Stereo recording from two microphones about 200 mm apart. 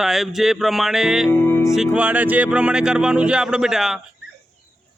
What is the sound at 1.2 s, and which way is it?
Music, 10° left (ahead or behind).